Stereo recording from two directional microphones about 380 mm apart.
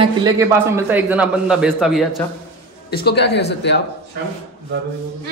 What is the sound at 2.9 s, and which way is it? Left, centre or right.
Speech, left.